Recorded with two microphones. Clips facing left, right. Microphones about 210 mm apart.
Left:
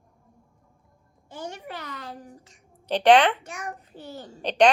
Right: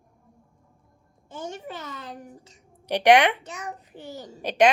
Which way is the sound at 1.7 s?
20° right (ahead or behind).